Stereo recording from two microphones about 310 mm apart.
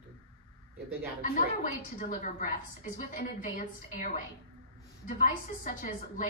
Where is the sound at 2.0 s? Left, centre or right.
Left.